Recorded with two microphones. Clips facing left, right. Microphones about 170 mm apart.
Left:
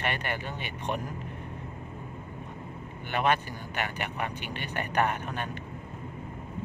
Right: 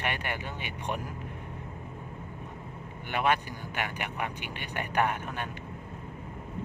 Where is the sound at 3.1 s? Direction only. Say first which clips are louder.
Left 1 dB; 10° right (ahead or behind).